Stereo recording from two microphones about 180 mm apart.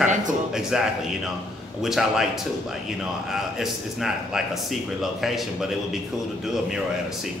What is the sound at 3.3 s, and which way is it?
A man's voice, centre (ahead or behind).